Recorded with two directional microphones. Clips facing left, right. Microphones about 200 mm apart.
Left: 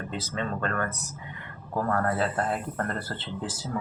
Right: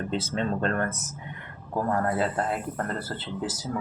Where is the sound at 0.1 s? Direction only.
25° right (ahead or behind); by 3.2 s 10° right (ahead or behind).